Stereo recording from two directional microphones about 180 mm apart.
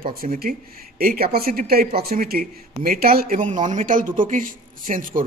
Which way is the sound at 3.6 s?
45° right (ahead or behind).